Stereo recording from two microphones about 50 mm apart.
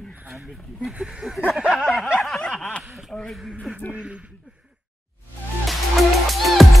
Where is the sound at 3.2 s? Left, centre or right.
Centre.